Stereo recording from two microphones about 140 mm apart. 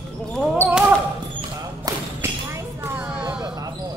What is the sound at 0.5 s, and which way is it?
Basketball bounce, 10° right (ahead or behind).